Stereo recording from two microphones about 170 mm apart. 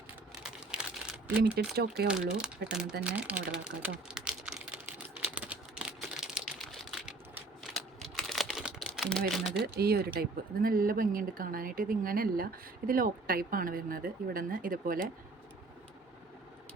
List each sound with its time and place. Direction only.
0.4 s crumpling: 5° right (ahead or behind)
1.7 s speech: 70° right (ahead or behind)
2.0 s speech: 5° right (ahead or behind)
3.0 s typing: 10° right (ahead or behind)
9.6 s speech: 65° right (ahead or behind)